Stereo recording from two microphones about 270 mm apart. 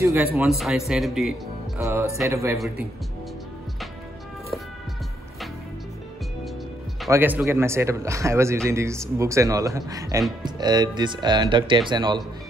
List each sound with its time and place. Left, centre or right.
0.0 s a man's voice: centre
7.1 s speech: centre